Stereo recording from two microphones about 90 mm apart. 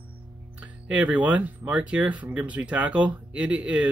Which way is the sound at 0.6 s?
15° right (ahead or behind).